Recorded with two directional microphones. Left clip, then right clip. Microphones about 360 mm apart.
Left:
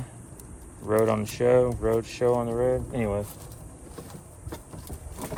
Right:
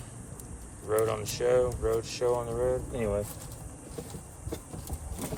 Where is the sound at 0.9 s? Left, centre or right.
Centre.